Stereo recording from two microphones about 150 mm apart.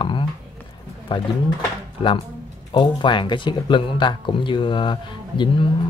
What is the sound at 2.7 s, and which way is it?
A man's voice, 30° left (ahead or behind).